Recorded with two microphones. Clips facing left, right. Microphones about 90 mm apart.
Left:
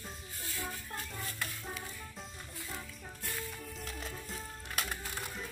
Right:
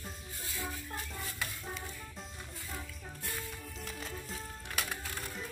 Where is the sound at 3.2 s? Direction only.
Centre (ahead or behind).